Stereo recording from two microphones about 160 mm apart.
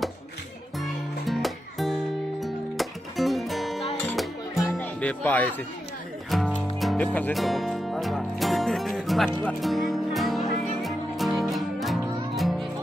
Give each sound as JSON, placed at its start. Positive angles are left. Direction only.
{"t": 0.7, "sound": "music", "side_deg": 0}
{"t": 7.1, "sound": "speech", "side_deg": 10}
{"t": 7.3, "sound": "music", "side_deg": 0}